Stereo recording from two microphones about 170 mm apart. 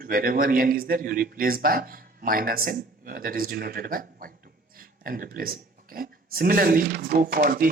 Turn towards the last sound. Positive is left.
turn(degrees=-55)  # may be behind; listen again after turning